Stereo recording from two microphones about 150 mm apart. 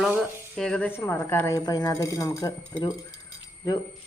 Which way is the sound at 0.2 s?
5° left (ahead or behind).